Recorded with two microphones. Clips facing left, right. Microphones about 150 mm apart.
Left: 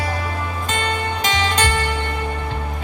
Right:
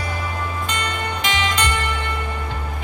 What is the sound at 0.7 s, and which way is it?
Music, 30° left (ahead or behind).